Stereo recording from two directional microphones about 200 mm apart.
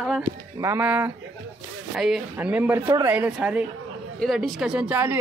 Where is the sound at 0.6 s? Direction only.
15° right (ahead or behind).